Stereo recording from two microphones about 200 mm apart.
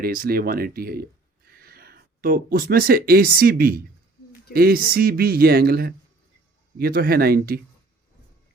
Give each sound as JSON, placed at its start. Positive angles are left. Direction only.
{"t": 0.0, "sound": "speech", "side_deg": -45}